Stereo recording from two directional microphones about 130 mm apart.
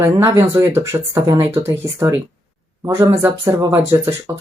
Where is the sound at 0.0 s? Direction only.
20° right (ahead or behind).